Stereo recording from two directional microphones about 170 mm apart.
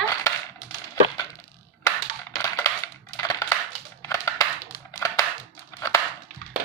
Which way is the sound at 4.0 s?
20° left (ahead or behind).